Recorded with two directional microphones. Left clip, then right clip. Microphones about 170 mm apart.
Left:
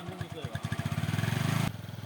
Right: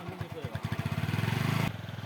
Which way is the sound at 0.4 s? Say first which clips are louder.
Left 1 dB; 35° left (ahead or behind).